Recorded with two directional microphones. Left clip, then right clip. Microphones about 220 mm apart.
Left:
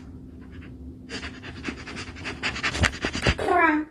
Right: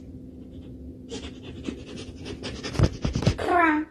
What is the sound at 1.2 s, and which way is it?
Pant, 25° left (ahead or behind).